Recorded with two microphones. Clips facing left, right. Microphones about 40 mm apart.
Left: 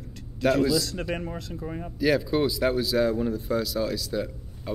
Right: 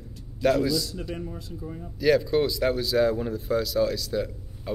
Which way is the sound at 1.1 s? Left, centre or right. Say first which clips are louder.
Left 3 dB; left.